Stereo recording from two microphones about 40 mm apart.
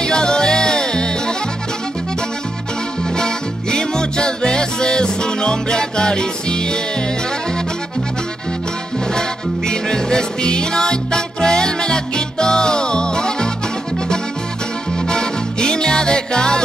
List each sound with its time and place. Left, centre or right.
0.0 s music: centre
3.2 s music: centre
9.7 s music: centre
15.0 s music: centre